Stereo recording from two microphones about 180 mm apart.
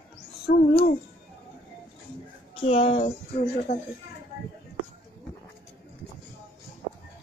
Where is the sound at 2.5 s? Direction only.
30° left (ahead or behind).